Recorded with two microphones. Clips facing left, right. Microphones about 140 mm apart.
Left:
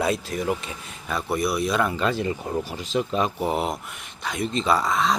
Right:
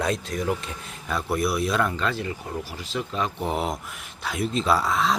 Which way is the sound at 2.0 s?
20° left (ahead or behind).